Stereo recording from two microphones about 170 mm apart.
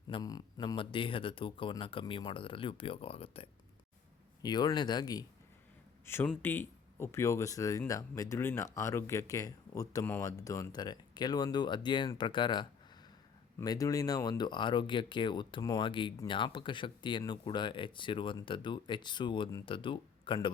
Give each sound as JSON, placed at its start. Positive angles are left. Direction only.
{"t": 0.1, "sound": "speech", "side_deg": 20}
{"t": 6.1, "sound": "speech", "side_deg": 15}